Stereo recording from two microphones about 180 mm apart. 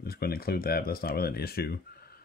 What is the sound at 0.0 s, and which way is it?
Speech, 60° left (ahead or behind).